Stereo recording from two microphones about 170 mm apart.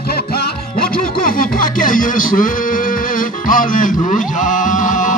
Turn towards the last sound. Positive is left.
turn(degrees=50)  # may be behind; listen again after turning